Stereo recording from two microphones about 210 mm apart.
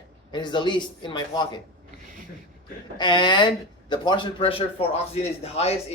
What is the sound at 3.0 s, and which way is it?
Speech, 20° left (ahead or behind).